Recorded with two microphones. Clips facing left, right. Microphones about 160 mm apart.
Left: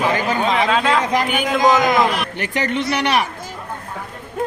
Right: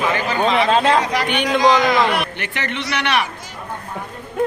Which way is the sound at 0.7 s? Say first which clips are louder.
Right 2 dB; 40° right (ahead or behind).